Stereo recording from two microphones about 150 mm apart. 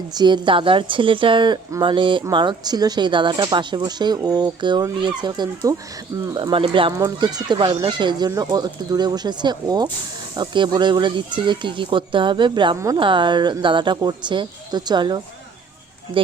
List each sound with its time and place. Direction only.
0.1 s speech: 30° right (ahead or behind)
6.9 s speech: 25° right (ahead or behind)
12.7 s speech: 20° right (ahead or behind)
13.0 s speech: 35° right (ahead or behind)